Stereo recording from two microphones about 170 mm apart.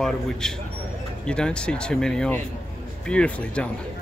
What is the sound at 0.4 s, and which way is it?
Speech, 5° left (ahead or behind).